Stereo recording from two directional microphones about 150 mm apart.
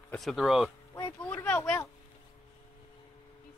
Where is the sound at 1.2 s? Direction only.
10° left (ahead or behind).